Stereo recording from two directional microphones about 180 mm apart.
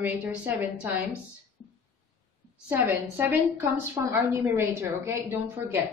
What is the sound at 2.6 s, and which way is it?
A woman's voice, 10° right (ahead or behind).